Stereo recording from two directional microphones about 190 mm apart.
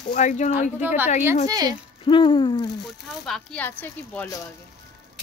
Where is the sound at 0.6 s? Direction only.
10° right (ahead or behind).